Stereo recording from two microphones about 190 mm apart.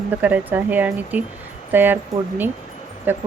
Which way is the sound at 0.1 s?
10° right (ahead or behind).